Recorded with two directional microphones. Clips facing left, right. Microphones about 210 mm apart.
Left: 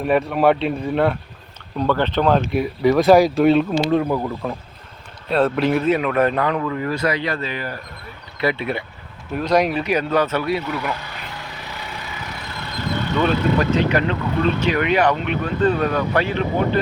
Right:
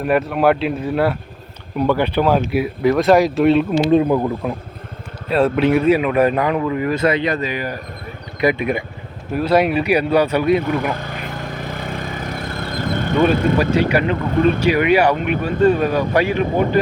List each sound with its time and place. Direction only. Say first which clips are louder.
0.0 s speech: right 1 dB; centre (ahead or behind)
3.9 s speech: right 6 dB; 20° right (ahead or behind)
5.3 s speech: right 3 dB; 5° right (ahead or behind)
10.6 s vehicle: right 5 dB; 50° right (ahead or behind)
13.7 s speech: right 2 dB; 10° right (ahead or behind)